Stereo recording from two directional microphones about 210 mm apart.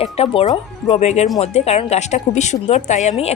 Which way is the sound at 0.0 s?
30° left (ahead or behind).